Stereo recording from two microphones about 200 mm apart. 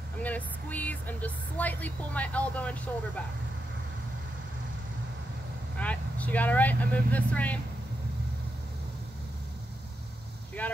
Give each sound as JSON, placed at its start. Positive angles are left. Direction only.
{"t": 0.2, "sound": "speech", "side_deg": 10}
{"t": 5.8, "sound": "speech", "side_deg": 5}
{"t": 10.6, "sound": "speech", "side_deg": 10}